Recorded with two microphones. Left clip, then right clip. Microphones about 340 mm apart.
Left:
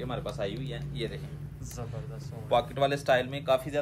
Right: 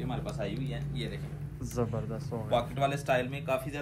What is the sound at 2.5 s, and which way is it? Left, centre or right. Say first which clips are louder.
A man's voice: left 3 dB; left.